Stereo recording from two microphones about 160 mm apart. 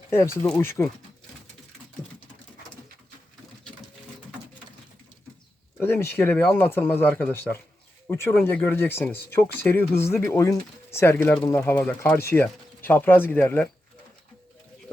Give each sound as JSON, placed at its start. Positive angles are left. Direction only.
{"t": 0.1, "sound": "speech", "side_deg": 15}
{"t": 5.8, "sound": "speech", "side_deg": 15}